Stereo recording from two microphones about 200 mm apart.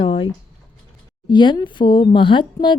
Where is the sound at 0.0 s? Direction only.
25° left (ahead or behind).